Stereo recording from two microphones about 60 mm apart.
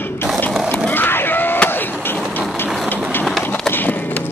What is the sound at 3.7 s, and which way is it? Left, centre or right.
Music, left.